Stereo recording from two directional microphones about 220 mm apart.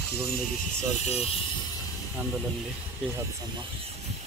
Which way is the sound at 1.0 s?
25° left (ahead or behind).